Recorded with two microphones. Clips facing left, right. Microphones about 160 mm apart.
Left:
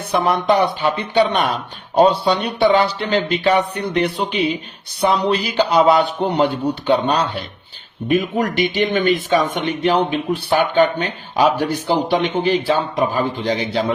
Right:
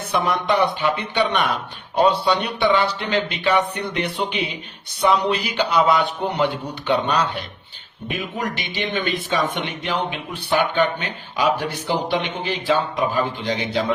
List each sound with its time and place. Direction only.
0.1 s speech: 35° left (ahead or behind)
8.0 s speech: 45° left (ahead or behind)